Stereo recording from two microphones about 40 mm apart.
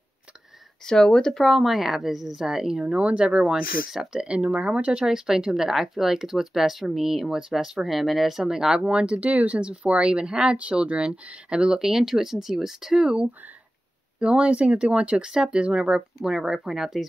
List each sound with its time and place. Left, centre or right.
0.8 s speech: centre
1.4 s speech: centre
3.0 s speech: right
5.0 s speech: centre
8.5 s speech: centre
8.8 s speech: right
11.8 s speech: centre
13.0 s speech: right
15.2 s speech: centre
16.2 s speech: centre